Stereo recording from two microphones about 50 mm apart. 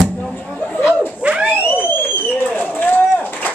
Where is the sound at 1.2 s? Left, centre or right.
Right.